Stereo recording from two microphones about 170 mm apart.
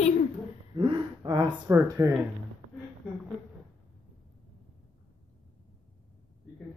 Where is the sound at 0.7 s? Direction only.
25° right (ahead or behind).